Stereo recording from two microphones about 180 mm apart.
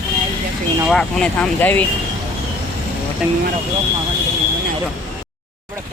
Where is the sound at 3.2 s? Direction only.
5° right (ahead or behind).